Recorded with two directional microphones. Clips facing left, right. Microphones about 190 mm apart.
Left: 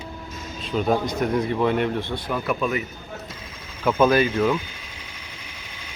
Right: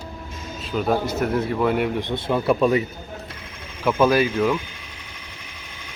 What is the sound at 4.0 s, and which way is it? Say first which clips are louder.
Speech: even; 10° right (ahead or behind).